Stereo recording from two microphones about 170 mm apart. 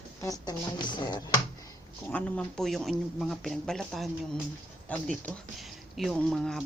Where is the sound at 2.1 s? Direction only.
5° left (ahead or behind).